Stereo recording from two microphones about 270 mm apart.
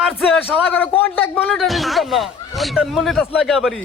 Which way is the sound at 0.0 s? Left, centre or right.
Centre.